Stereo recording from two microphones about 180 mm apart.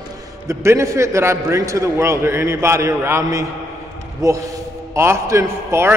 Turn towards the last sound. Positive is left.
turn(degrees=-15)  # may be behind; listen again after turning